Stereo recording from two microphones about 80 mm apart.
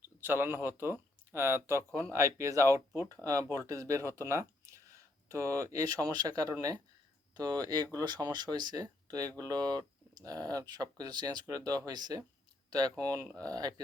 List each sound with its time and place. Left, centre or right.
0.2 s speech: right